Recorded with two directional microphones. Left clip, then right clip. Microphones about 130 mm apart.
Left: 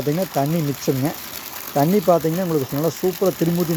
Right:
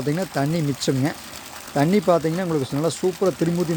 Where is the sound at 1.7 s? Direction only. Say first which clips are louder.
Left 2 dB; 20° right (ahead or behind).